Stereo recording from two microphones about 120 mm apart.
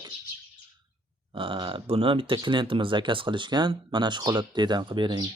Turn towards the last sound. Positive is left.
turn(degrees=-40)  # may be behind; listen again after turning